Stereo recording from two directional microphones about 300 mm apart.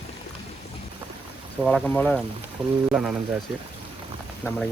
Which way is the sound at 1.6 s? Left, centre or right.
Centre.